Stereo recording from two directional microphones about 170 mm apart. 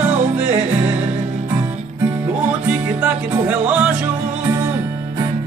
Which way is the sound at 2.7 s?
10° right (ahead or behind).